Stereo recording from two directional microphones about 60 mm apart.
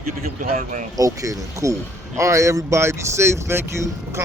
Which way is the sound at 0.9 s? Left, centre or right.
Right.